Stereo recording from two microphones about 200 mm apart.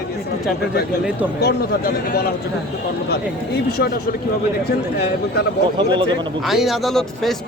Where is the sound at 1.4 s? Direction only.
55° left (ahead or behind).